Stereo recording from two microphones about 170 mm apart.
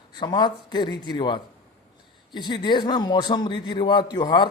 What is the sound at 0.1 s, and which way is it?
A man's voice, 25° left (ahead or behind).